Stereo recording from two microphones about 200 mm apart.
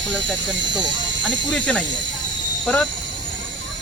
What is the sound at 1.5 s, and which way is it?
Speech, 5° left (ahead or behind).